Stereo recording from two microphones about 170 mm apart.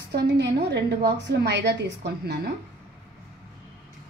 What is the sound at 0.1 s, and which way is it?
A woman's voice, 90° right.